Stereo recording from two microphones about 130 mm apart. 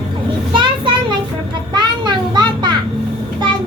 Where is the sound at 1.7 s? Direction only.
35° right (ahead or behind).